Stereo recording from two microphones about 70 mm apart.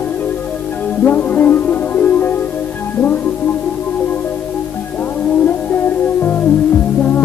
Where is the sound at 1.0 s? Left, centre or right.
Left.